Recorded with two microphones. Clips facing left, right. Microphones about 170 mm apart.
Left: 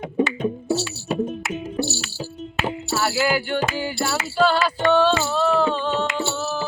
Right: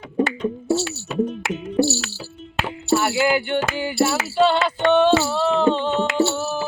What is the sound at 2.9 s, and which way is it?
Speech, 20° right (ahead or behind).